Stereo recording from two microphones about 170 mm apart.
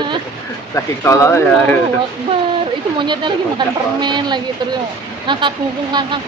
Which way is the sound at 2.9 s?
25° right (ahead or behind).